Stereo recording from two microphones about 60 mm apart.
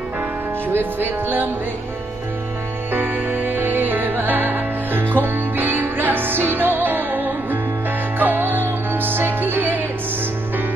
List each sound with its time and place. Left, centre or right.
0.7 s music: right
2.9 s music: right